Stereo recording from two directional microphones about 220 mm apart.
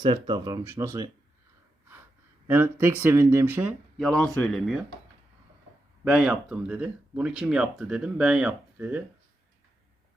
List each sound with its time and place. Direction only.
0.0 s speech: 20° right (ahead or behind)
2.5 s speech: 10° right (ahead or behind)
6.1 s speech: 5° right (ahead or behind)